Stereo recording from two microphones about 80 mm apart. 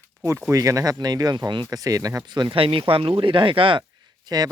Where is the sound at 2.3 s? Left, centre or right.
Right.